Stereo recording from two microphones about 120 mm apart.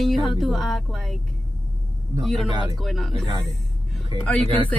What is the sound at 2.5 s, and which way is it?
Speech, 35° right (ahead or behind).